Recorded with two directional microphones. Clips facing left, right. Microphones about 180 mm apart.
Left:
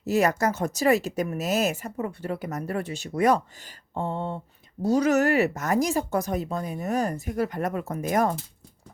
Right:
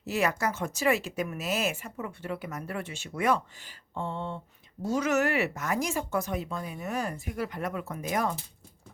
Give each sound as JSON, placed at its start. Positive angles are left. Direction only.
{"t": 0.0, "sound": "speech", "side_deg": 40}